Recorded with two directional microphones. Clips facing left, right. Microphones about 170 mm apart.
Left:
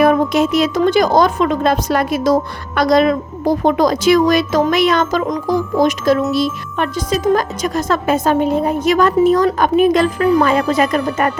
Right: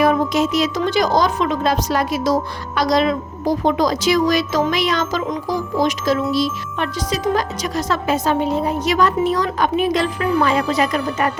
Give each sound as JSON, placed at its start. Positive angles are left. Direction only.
{"t": 0.0, "sound": "a woman's voice", "side_deg": 55}